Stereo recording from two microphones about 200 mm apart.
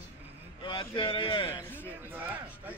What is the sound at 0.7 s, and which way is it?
Speech, 25° left (ahead or behind).